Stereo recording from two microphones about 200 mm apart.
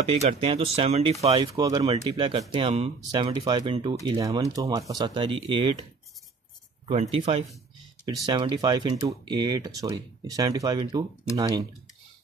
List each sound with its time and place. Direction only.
0.0 s speech: 30° right (ahead or behind)
1.4 s speech: 15° right (ahead or behind)
6.9 s speech: 30° right (ahead or behind)